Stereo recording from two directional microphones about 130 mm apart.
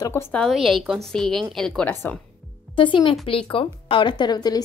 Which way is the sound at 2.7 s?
40° left (ahead or behind).